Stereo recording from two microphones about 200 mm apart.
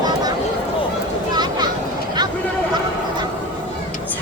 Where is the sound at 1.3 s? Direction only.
20° right (ahead or behind).